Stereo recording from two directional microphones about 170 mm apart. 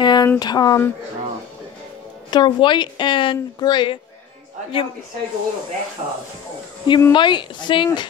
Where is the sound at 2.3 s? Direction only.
25° left (ahead or behind).